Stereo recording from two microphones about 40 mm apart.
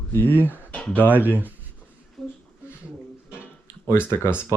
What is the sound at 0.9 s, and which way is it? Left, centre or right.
Speech, right.